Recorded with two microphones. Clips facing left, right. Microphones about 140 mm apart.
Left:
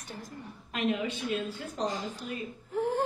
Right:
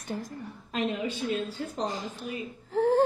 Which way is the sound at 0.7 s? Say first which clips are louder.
Even; 35° right (ahead or behind).